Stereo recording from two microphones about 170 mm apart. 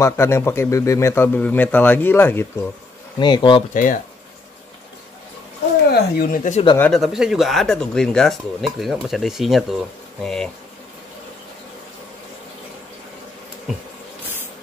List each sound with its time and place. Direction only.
0.0 s a man's voice: 15° left (ahead or behind)
3.2 s speech: 25° left (ahead or behind)
3.7 s speech: 50° left (ahead or behind)
5.9 s speech: 60° left (ahead or behind)
6.8 s speech: centre (ahead or behind)